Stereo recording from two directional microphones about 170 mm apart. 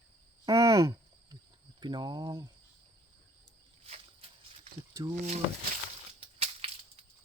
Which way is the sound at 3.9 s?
35° right (ahead or behind).